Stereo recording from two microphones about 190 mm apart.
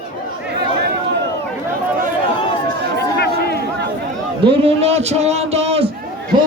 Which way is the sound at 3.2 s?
55° left (ahead or behind).